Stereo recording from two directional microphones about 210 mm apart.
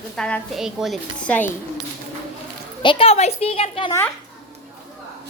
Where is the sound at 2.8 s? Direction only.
25° left (ahead or behind).